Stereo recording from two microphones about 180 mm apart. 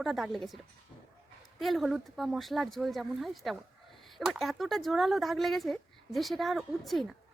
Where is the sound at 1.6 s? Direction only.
Centre (ahead or behind).